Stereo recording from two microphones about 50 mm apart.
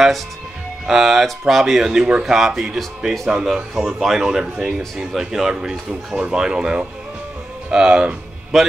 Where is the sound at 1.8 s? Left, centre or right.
Centre.